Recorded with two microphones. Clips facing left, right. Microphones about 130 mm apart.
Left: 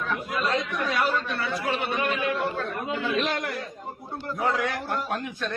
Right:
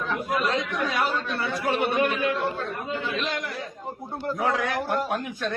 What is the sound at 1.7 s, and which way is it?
Speech, 50° right (ahead or behind).